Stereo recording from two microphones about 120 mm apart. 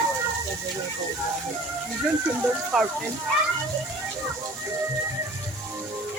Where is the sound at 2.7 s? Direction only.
5° right (ahead or behind).